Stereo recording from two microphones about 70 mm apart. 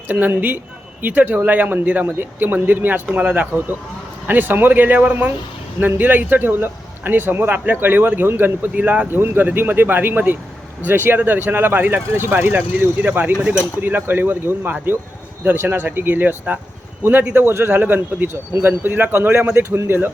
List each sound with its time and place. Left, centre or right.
0.1 s a man's voice: right
8.7 s a man's voice: centre
13.4 s speech: centre
13.8 s a man's voice: right